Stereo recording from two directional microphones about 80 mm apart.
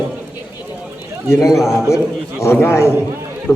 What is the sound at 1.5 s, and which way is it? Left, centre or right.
Speech, centre.